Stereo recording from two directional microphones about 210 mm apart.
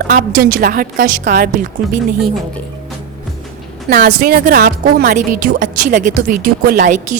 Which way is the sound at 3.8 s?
45° right (ahead or behind).